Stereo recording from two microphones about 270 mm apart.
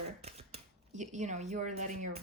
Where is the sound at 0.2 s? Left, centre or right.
Right.